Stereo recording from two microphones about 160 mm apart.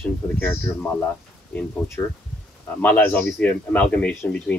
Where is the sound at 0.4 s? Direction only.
10° left (ahead or behind).